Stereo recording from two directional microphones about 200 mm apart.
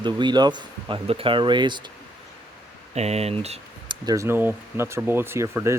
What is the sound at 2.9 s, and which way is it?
Speech, 30° right (ahead or behind).